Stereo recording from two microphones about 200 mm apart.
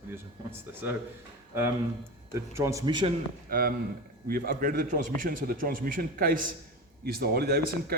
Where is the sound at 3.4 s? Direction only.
45° right (ahead or behind).